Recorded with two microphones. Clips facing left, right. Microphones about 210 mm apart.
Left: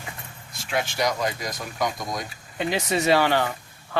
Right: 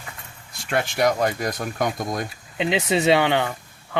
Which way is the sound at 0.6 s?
60° right (ahead or behind).